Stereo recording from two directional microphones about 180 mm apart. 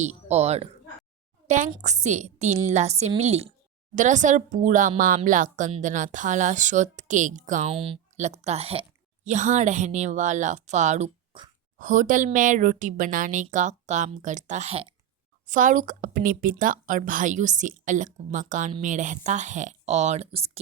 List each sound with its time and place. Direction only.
0.0 s a woman's voice: 40° right (ahead or behind)
7.7 s a woman's voice: 30° right (ahead or behind)
15.4 s a woman's voice: 45° right (ahead or behind)